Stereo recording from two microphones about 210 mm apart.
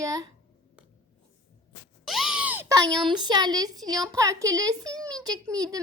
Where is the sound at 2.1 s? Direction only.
Centre (ahead or behind); by 3.0 s 20° right (ahead or behind).